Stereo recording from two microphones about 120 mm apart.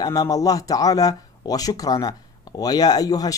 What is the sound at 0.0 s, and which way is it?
Speech, 30° left (ahead or behind).